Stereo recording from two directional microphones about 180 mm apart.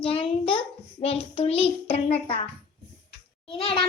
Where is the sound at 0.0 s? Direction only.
30° left (ahead or behind).